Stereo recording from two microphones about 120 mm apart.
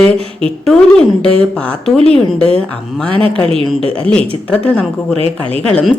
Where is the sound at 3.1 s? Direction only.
50° right (ahead or behind).